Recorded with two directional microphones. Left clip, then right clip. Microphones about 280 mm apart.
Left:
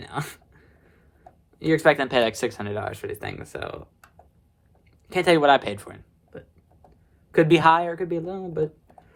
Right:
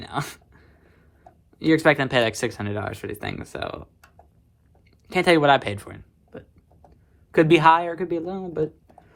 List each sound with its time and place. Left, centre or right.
0.0 s a sound: centre
1.5 s speech: centre
5.0 s speech: centre
7.3 s speech: centre